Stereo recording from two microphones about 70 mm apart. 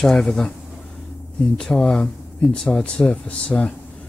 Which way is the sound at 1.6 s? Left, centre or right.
Centre.